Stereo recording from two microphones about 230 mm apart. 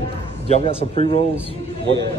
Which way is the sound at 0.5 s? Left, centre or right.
Left.